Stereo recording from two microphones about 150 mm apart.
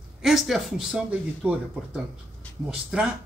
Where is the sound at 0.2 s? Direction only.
Centre (ahead or behind).